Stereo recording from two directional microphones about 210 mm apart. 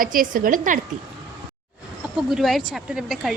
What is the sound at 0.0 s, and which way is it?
Speech, 40° right (ahead or behind).